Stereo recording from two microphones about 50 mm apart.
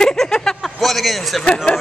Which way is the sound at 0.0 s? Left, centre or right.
Centre.